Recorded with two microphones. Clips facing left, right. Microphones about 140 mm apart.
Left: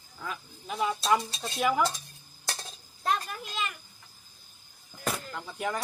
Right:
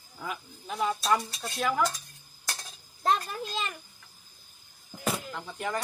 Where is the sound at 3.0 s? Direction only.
30° right (ahead or behind).